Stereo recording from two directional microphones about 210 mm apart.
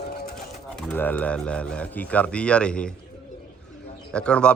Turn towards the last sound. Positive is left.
turn(degrees=5)  # may be behind; listen again after turning